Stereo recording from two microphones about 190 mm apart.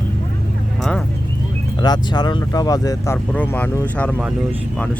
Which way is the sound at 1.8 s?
20° left (ahead or behind).